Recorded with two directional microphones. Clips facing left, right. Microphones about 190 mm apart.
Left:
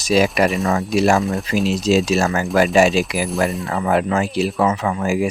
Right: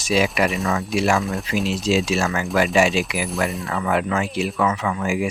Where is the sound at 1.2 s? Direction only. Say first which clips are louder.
Left 4 dB; centre (ahead or behind).